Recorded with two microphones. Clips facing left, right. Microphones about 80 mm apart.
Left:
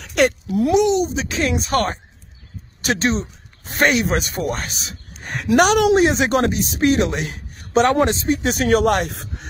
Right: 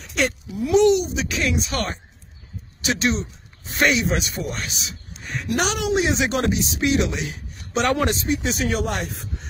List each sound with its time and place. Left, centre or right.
0.0 s a sound: left
0.9 s speech: left
1.5 s speech: left
7.8 s speech: left
8.3 s speech: left